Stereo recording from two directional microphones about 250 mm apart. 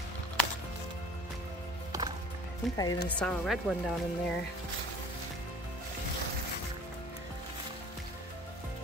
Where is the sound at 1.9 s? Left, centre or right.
Centre.